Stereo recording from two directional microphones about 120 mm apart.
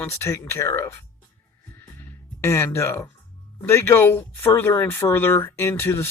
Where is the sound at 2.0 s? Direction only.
20° left (ahead or behind).